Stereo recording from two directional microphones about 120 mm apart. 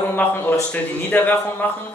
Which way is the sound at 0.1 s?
15° left (ahead or behind).